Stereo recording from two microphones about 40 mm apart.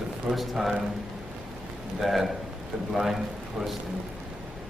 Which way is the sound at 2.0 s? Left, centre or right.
Centre.